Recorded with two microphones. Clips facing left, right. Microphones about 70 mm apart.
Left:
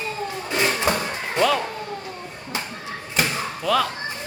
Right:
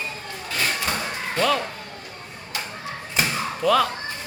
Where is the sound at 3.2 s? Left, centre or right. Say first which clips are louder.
Even; centre.